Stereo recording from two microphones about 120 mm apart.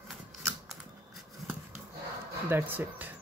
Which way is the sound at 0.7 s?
Centre (ahead or behind).